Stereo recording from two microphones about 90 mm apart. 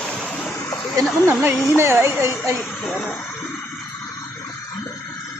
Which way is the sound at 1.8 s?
30° right (ahead or behind).